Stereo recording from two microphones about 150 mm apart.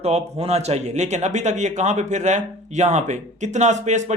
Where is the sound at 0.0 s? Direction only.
45° right (ahead or behind).